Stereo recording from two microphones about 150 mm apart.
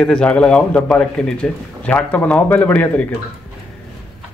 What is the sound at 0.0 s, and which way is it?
A man's voice, 5° left (ahead or behind).